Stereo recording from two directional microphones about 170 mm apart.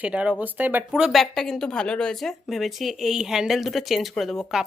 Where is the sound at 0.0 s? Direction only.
5° right (ahead or behind).